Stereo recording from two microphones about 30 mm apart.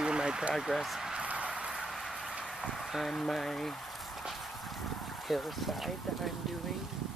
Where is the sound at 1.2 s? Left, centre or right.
Right.